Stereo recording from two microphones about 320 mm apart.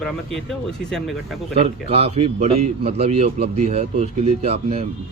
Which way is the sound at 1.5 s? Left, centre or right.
Centre.